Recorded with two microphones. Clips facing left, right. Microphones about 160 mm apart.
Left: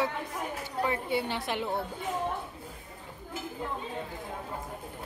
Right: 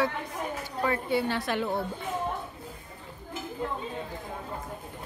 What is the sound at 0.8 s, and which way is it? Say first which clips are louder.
Speech: right 3 dB; 15° left (ahead or behind).